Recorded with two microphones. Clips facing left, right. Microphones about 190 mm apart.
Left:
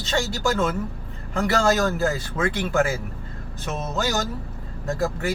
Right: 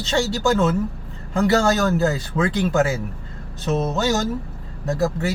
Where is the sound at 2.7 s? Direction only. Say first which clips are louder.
Right 2 dB; 20° right (ahead or behind).